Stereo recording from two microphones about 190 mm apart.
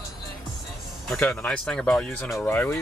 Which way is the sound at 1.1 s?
5° left (ahead or behind).